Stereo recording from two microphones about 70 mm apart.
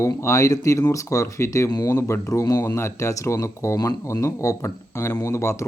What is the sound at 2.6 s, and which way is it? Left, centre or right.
Speech, left.